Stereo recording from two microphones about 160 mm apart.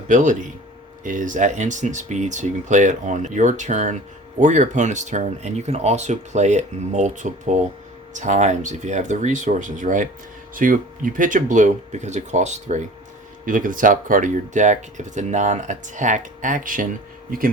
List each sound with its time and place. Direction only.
0.1 s speech: 50° right (ahead or behind)
13.4 s speech: 55° right (ahead or behind)